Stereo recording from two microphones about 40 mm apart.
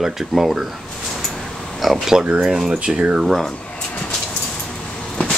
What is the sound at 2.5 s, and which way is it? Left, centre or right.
Speech, right.